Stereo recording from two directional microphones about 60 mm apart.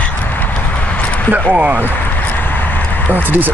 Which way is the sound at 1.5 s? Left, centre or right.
Right.